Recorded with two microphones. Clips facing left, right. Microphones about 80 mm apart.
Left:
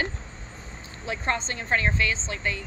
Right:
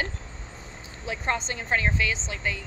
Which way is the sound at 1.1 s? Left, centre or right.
Centre.